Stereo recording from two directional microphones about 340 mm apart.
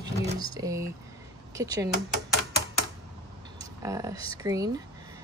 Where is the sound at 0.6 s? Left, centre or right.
Centre.